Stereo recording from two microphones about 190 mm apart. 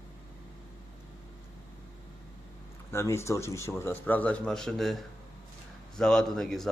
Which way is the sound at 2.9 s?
15° left (ahead or behind).